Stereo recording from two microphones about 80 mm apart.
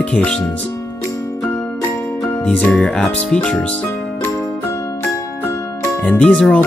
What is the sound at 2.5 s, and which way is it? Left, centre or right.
Speech, left.